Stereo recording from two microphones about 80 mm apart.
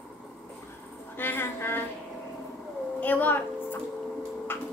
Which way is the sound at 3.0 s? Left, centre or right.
Left.